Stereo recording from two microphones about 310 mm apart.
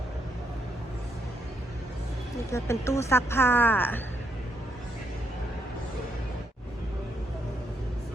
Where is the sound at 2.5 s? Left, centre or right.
Centre.